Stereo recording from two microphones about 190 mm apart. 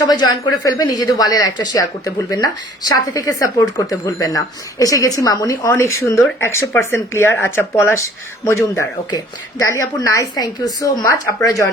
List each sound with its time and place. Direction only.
0.1 s speech: 20° left (ahead or behind)